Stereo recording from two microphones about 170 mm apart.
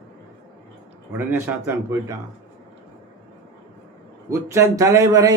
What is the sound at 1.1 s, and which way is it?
Speech, 10° right (ahead or behind).